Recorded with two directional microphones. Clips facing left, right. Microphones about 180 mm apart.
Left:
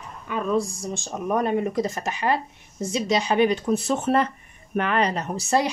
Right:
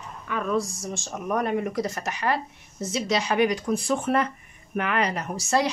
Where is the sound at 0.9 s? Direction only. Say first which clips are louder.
Left 3 dB; 25° left (ahead or behind).